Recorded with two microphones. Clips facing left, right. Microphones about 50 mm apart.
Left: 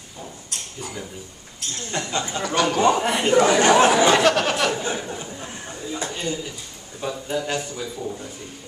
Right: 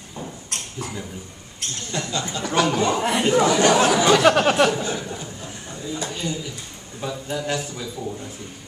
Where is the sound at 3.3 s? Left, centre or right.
Left.